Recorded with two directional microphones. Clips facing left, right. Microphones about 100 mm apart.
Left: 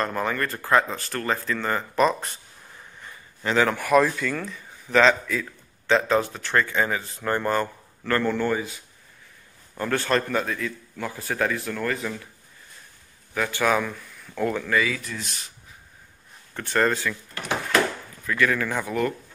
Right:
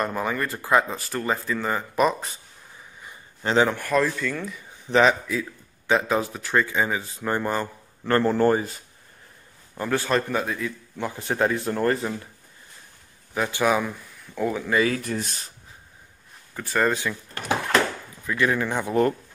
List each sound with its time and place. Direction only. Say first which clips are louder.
0.0 s speech: even; 10° right (ahead or behind)
3.7 s speech: left 3 dB; 10° left (ahead or behind)
5.0 s a man's voice: even; 15° right (ahead or behind)
8.1 s speech: right 4 dB; 35° right (ahead or behind)
9.8 s speech: even; 10° right (ahead or behind)
11.1 s speech: right 2 dB; 25° right (ahead or behind)
13.3 s speech: right 1 dB; 20° right (ahead or behind)
14.8 s speech: right 3 dB; 50° right (ahead or behind)
15.2 s speech: right 1 dB; 40° right (ahead or behind)
16.5 s speech: even; 5° right (ahead or behind)
16.9 s a man's voice: even; 20° right (ahead or behind)
18.2 s a man's voice: even; 20° right (ahead or behind)